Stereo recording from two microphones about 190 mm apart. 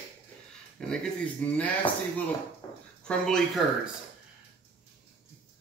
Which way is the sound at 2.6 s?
20° left (ahead or behind).